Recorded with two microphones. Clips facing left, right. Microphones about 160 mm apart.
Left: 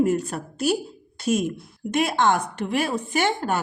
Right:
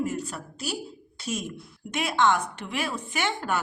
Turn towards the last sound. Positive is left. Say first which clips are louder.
# left 6 dB
turn(degrees=40)  # may be behind; listen again after turning